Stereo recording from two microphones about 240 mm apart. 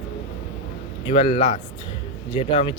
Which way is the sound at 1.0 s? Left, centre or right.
Left.